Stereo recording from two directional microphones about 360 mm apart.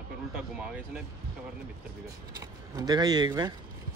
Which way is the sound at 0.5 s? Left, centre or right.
Centre.